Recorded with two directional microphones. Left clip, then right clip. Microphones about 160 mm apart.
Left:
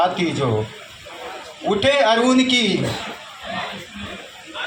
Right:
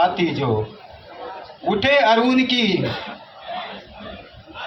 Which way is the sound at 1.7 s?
40° left (ahead or behind).